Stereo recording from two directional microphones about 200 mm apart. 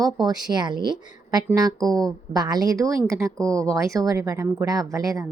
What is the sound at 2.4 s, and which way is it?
Speech, 20° right (ahead or behind).